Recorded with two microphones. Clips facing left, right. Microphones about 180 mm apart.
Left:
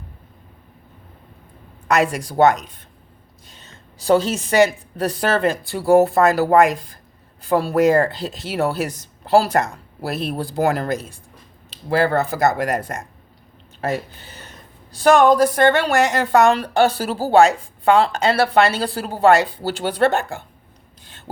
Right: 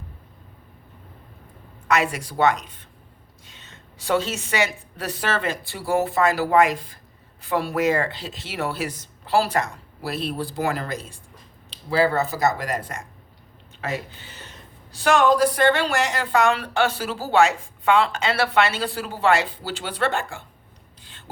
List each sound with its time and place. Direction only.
1.9 s a woman's voice: 40° left (ahead or behind)
11.9 s speech: 55° left (ahead or behind)
13.8 s a woman's voice: 40° left (ahead or behind)